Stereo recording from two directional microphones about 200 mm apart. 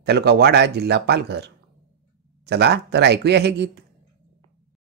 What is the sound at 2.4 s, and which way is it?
Speech, 55° right (ahead or behind).